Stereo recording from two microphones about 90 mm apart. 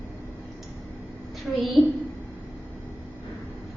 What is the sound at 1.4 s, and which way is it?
Speech, centre (ahead or behind).